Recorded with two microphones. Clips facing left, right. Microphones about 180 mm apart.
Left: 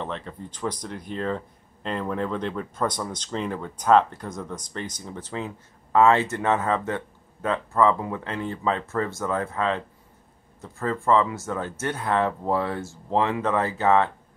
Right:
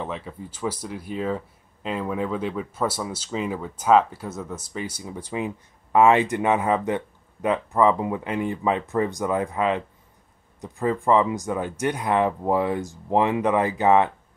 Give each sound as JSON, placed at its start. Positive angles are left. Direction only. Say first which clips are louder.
{"t": 0.0, "sound": "speech", "louder": "right 1 dB", "side_deg": -5}